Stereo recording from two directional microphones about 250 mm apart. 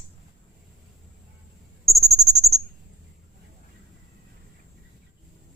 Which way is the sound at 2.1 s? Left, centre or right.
Centre.